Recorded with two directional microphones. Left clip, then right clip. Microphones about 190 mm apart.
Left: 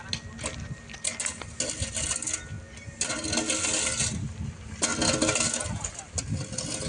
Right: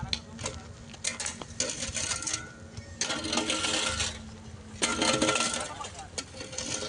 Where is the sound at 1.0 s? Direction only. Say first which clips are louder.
Left 1 dB; centre (ahead or behind).